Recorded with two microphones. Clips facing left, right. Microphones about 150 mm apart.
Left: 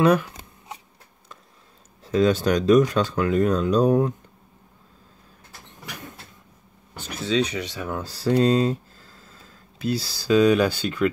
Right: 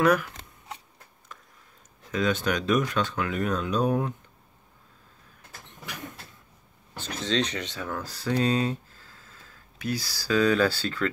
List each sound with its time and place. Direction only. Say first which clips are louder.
0.0 s speech: left 4 dB; 25° left (ahead or behind)
2.0 s speech: left 7 dB; 35° left (ahead or behind)
6.9 s speech: left 4 dB; 10° left (ahead or behind)
8.0 s speech: left 7 dB; 30° left (ahead or behind); by 11.1 s 15° left (ahead or behind)